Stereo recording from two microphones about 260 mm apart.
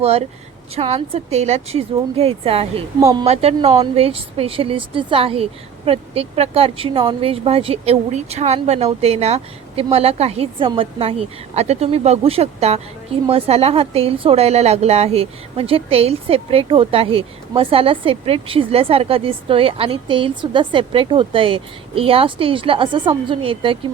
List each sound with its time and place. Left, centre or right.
0.0 s a woman's voice: right
3.2 s a woman's voice: right